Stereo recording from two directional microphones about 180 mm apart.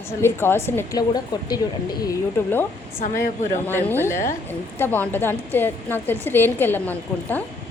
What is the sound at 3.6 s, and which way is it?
A woman's voice, 10° left (ahead or behind).